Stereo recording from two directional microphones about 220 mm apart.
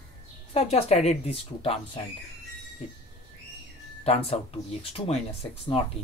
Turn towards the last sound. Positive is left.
turn(degrees=30)  # may be behind; listen again after turning